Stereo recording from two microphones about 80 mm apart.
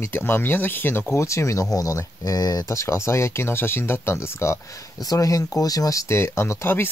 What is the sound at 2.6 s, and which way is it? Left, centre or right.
Speech, left.